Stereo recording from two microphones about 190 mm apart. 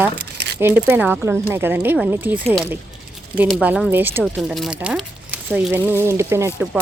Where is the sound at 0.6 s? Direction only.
10° right (ahead or behind).